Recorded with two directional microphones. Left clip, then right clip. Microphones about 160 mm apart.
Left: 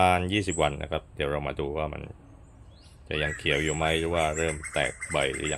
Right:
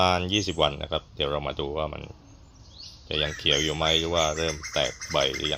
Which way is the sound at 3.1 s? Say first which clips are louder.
Right 3 dB; 5° left (ahead or behind).